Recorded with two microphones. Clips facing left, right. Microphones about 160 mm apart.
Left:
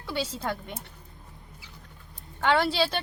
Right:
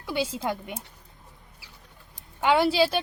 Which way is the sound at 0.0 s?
10° right (ahead or behind).